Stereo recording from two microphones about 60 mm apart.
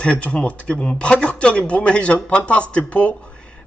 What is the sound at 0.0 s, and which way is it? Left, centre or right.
A man's voice, left.